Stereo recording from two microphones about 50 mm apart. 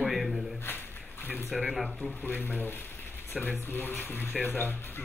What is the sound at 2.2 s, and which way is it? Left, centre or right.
Speech, left.